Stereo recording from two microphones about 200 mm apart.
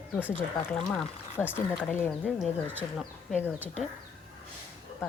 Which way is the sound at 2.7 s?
10° right (ahead or behind).